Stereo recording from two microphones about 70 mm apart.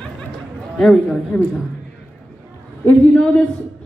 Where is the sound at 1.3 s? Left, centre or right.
Left.